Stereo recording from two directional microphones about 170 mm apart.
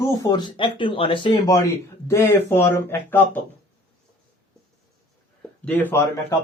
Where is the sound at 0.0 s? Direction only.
20° left (ahead or behind).